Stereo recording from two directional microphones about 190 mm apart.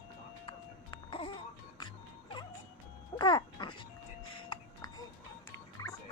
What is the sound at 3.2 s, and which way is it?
Music, 25° left (ahead or behind).